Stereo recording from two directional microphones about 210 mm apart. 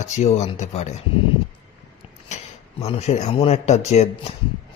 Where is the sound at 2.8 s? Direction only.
30° left (ahead or behind).